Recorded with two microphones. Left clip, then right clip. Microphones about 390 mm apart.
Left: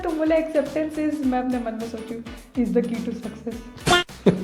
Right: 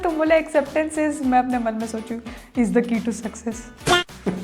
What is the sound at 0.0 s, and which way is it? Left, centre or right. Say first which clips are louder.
A woman's voice: right 3 dB; right.